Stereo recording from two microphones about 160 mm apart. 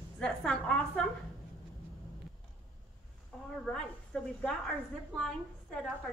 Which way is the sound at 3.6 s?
5° left (ahead or behind).